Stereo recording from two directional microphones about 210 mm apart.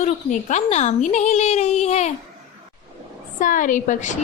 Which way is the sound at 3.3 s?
40° left (ahead or behind).